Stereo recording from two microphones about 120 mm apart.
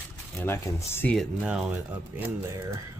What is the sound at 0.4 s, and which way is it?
Speech, 20° left (ahead or behind).